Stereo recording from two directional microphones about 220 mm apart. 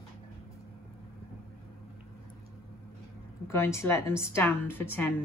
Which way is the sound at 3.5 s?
10° left (ahead or behind).